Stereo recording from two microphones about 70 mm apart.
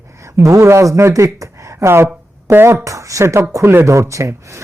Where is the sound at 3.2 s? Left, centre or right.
Right.